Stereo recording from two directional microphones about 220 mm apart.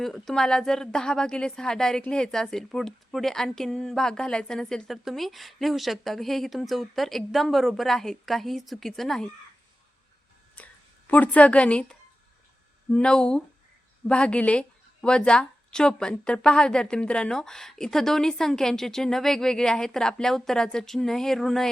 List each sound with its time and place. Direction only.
0.0 s a woman's voice: centre (ahead or behind)
10.5 s a woman's voice: 5° left (ahead or behind)